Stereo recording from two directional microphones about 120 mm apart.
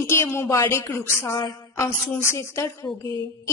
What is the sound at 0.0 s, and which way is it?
A woman's voice, 20° left (ahead or behind).